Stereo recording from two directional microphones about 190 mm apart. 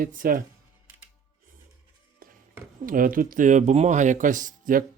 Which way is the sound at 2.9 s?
45° right (ahead or behind).